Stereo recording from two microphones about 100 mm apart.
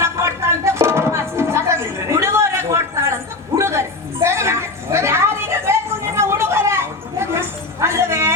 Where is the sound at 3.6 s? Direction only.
25° right (ahead or behind).